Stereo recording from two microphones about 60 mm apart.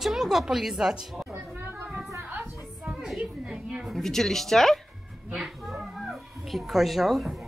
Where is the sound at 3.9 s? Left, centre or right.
Centre.